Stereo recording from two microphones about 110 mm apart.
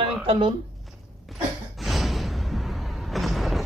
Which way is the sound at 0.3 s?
55° right (ahead or behind).